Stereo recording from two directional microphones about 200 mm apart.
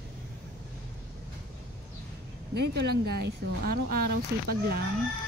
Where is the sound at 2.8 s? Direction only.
55° right (ahead or behind).